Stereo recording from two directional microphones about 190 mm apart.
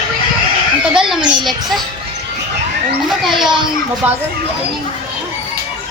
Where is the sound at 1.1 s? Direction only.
25° right (ahead or behind).